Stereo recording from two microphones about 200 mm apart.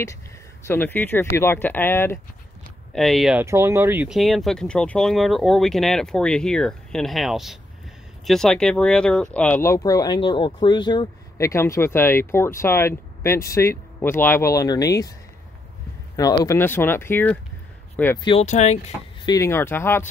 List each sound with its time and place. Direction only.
0.7 s speech: 10° left (ahead or behind)
2.9 s speech: centre (ahead or behind)
3.4 s speech: 15° right (ahead or behind); by 15.1 s 15° left (ahead or behind)
16.2 s speech: 15° left (ahead or behind)
18.2 s speech: 30° left (ahead or behind)
19.2 s speech: 15° left (ahead or behind)